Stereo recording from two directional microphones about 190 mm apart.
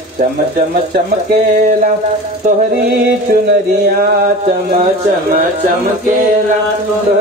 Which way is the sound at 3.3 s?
55° right (ahead or behind).